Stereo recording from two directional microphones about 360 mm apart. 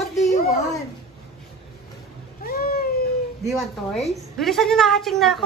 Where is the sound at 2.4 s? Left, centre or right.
Left.